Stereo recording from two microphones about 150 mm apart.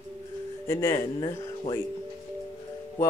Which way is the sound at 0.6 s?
20° left (ahead or behind).